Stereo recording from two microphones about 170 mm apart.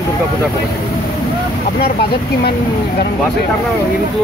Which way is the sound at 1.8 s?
65° left (ahead or behind).